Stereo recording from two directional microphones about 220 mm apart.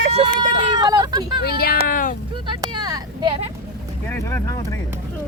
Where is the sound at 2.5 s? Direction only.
20° right (ahead or behind).